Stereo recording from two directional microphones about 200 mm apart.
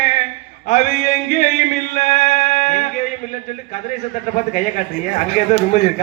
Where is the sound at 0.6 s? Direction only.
35° left (ahead or behind).